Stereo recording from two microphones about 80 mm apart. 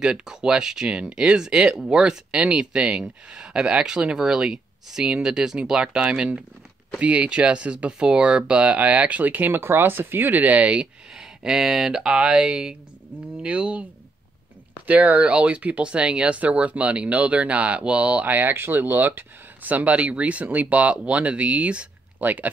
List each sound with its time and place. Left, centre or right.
0.0 s speech: centre
14.9 s speech: centre